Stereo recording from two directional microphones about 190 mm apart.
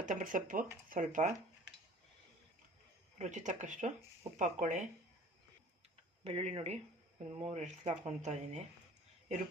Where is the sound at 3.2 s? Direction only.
40° right (ahead or behind).